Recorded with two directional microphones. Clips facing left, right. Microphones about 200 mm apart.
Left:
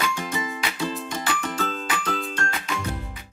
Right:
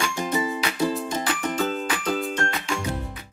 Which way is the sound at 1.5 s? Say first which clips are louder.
Right 3 dB; 15° right (ahead or behind).